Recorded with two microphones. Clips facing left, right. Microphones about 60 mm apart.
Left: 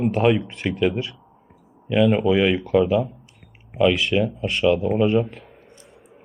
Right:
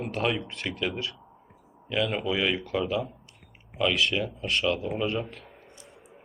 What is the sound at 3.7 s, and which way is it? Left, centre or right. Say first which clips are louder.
Speech: left 7 dB; centre.